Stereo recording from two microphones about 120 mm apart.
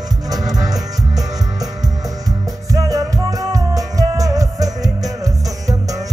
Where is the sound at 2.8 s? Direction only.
30° right (ahead or behind).